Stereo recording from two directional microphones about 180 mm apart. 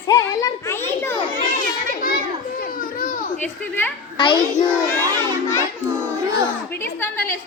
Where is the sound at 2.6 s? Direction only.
50° left (ahead or behind).